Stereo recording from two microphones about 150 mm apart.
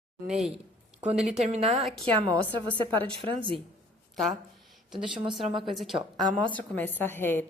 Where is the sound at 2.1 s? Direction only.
30° right (ahead or behind).